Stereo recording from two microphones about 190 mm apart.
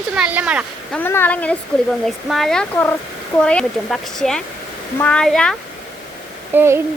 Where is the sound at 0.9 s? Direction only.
10° left (ahead or behind).